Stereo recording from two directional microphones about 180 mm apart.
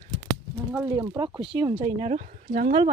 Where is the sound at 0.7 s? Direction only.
15° right (ahead or behind); by 2.8 s 45° right (ahead or behind).